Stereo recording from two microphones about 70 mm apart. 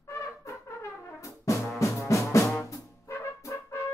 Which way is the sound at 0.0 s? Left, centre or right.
Left.